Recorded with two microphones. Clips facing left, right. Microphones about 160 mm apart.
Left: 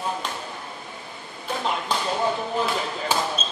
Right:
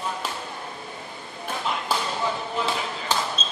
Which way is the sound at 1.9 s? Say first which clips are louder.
Right 3 dB; 5° right (ahead or behind).